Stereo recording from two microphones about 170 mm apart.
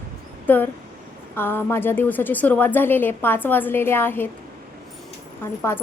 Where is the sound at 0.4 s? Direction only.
10° left (ahead or behind).